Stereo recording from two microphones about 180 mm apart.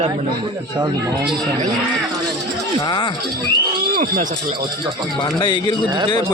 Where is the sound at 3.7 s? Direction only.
50° right (ahead or behind).